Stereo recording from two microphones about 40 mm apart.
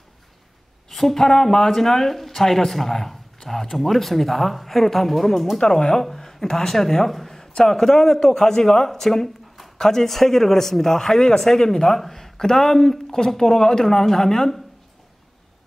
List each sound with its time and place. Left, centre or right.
0.8 s speech: centre
5.6 s speech: centre
7.1 s a sound: centre
7.6 s speech: centre